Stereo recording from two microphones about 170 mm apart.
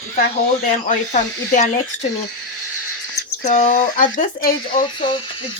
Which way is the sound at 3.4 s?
50° left (ahead or behind).